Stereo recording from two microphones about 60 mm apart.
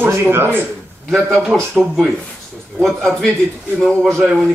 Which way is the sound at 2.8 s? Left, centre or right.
Centre.